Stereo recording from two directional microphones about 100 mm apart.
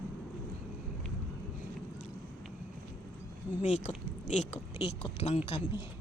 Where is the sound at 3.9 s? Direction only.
85° left.